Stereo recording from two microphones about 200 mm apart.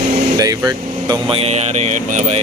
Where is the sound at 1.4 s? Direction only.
35° right (ahead or behind).